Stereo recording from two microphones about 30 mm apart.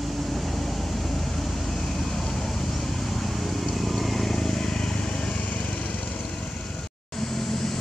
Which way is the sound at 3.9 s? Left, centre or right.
Centre.